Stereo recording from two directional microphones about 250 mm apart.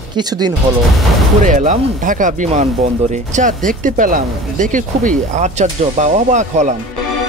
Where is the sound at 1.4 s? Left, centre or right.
Right.